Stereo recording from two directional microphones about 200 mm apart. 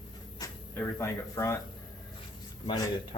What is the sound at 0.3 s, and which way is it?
Speech, 15° left (ahead or behind).